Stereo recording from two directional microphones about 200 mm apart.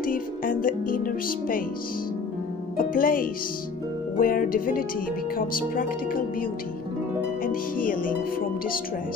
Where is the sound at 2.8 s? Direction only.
45° left (ahead or behind).